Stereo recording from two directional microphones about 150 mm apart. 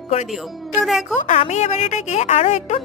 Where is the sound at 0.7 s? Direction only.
5° right (ahead or behind).